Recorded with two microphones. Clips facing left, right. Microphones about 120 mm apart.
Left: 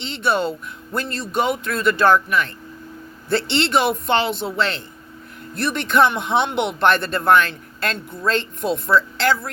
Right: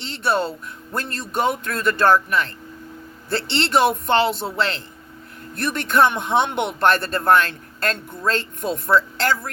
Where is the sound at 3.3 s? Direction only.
30° right (ahead or behind).